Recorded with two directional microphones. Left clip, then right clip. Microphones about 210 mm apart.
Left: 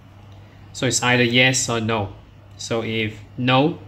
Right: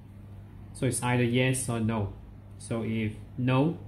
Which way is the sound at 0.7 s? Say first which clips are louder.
Left 11 dB; 15° left (ahead or behind).